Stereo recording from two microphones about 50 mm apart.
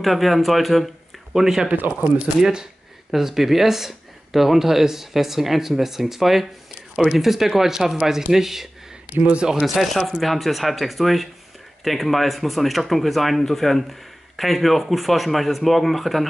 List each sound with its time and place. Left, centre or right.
0.0 s speech: centre
1.3 s speech: centre
1.7 s speech: right
2.4 s speech: centre
9.2 s speech: right
9.8 s speech: centre